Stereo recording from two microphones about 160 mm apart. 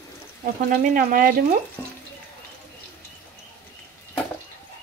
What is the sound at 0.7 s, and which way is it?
Speech, 60° right (ahead or behind).